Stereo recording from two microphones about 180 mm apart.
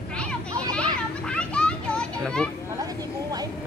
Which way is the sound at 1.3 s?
5° left (ahead or behind).